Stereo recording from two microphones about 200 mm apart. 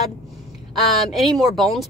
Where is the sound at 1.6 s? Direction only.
Centre (ahead or behind).